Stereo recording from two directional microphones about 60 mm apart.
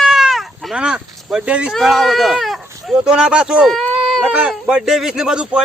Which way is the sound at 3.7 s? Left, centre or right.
Centre.